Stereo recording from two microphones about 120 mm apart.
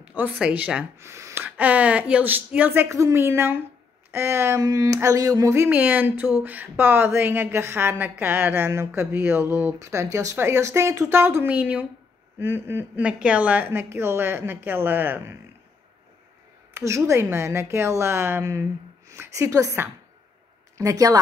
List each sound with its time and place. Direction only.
0.1 s a woman's voice: 15° right (ahead or behind)
0.9 s a woman's voice: 20° right (ahead or behind)
16.7 s a woman's voice: 25° right (ahead or behind)